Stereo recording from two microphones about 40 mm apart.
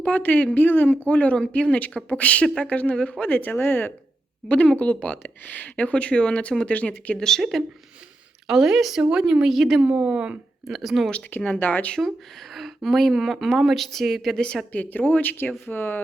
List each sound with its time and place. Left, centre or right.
0.0 s speech: left
4.4 s speech: left
7.2 s speech: centre
8.4 s speech: centre
9.0 s speech: right
9.5 s speech: centre
9.8 s speech: right
10.7 s speech: centre
11.3 s speech: left
11.6 s speech: left
11.9 s speech: centre
14.3 s a woman's voice: left
14.7 s speech: left
15.6 s speech: left